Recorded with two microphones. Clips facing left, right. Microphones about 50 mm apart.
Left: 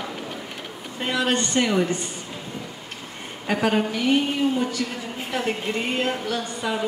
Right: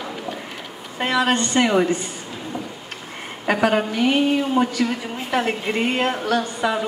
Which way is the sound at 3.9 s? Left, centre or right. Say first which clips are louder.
Right 3 dB; right.